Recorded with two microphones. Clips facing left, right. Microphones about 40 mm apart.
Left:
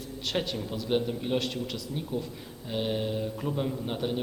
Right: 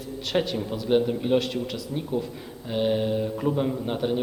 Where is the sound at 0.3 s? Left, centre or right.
Centre.